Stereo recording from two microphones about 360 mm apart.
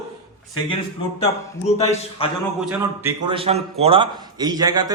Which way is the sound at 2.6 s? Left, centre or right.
Centre.